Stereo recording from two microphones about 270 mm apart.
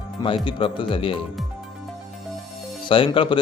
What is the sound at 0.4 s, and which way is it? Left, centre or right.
Speech, centre.